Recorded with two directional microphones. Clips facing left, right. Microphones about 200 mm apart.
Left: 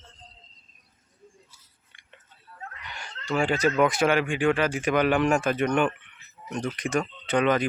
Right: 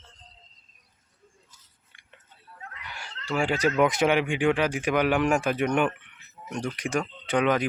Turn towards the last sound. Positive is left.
turn(degrees=-10)  # may be behind; listen again after turning